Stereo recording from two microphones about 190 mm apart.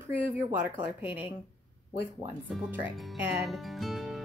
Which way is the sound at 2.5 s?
5° right (ahead or behind).